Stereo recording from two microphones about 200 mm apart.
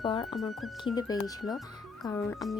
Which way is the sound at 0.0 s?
25° left (ahead or behind).